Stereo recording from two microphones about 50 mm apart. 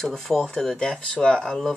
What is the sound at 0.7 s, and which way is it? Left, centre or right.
Speech, centre.